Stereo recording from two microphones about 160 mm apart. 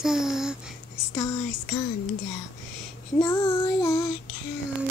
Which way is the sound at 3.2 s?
25° left (ahead or behind).